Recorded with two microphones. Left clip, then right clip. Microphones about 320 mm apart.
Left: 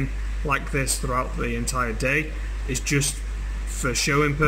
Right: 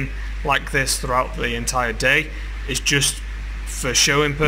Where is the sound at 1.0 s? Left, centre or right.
Right.